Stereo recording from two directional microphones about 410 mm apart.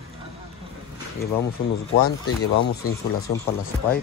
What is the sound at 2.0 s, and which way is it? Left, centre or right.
Speech, left.